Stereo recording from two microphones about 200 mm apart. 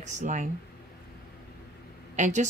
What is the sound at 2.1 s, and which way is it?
Speech, 40° right (ahead or behind).